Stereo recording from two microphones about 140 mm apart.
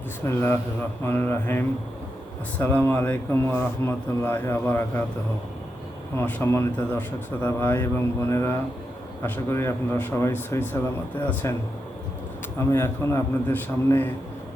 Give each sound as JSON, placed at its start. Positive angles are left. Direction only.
{"t": 0.3, "sound": "speech", "side_deg": 15}
{"t": 6.1, "sound": "speech", "side_deg": 15}